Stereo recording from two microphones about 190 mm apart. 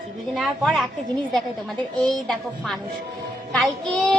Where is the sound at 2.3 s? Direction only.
Centre (ahead or behind).